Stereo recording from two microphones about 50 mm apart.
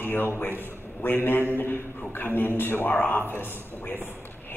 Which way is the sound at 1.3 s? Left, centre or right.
Left.